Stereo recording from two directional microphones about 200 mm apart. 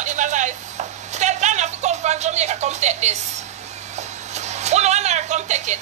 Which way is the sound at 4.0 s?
35° right (ahead or behind).